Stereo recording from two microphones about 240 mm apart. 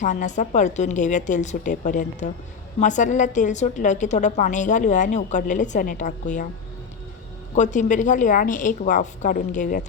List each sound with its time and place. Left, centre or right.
0.0 s a woman's voice: left
7.5 s a woman's voice: left